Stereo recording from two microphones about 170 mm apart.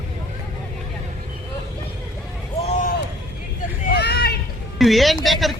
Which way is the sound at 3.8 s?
70° left (ahead or behind).